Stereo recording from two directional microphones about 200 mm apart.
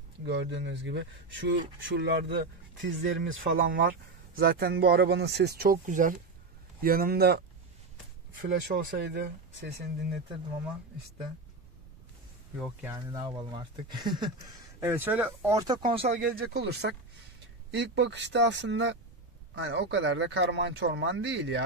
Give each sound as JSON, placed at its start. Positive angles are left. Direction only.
{"t": 0.2, "sound": "speech", "side_deg": -60}
{"t": 3.0, "sound": "speech", "side_deg": -50}
{"t": 8.7, "sound": "speech", "side_deg": -60}
{"t": 12.8, "sound": "speech", "side_deg": -20}
{"t": 16.2, "sound": "speech", "side_deg": -50}